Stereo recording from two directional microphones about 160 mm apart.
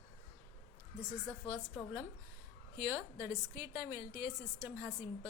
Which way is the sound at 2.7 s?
15° right (ahead or behind).